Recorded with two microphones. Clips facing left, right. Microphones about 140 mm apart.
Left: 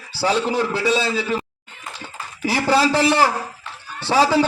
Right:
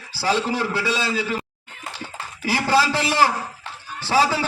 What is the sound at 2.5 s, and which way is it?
Speech, 20° left (ahead or behind).